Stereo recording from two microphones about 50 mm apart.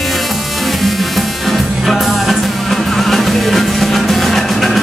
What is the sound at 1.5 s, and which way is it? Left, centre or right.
Music, centre.